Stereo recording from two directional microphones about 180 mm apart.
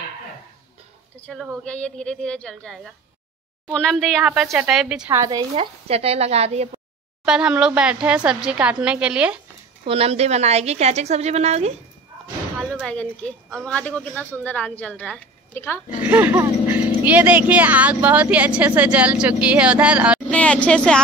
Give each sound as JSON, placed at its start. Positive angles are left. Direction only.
{"t": 1.2, "sound": "speech", "side_deg": 0}
{"t": 5.1, "sound": "a woman's voice", "side_deg": -20}
{"t": 5.5, "sound": "a woman's voice", "side_deg": -35}
{"t": 7.2, "sound": "speech", "side_deg": -5}
{"t": 9.8, "sound": "a woman's voice", "side_deg": -35}
{"t": 12.8, "sound": "speech", "side_deg": 5}
{"t": 16.0, "sound": "speech", "side_deg": -10}
{"t": 20.2, "sound": "speech", "side_deg": 5}